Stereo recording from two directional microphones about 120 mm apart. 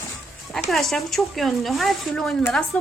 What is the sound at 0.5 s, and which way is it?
A woman's voice, centre (ahead or behind).